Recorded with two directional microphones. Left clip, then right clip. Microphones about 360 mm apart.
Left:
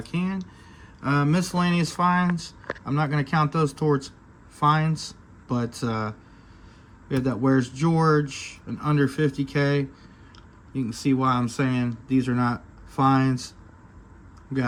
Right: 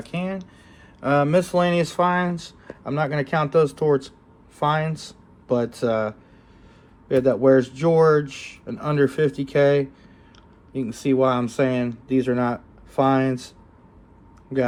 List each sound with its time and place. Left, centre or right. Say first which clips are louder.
0.0 s speech: right 3 dB; centre